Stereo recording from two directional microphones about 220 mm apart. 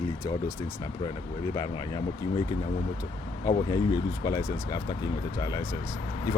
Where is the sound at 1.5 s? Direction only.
15° left (ahead or behind).